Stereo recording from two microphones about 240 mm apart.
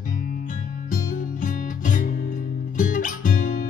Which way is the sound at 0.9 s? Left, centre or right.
Left.